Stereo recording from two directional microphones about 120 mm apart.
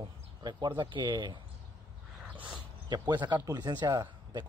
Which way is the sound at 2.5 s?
35° right (ahead or behind).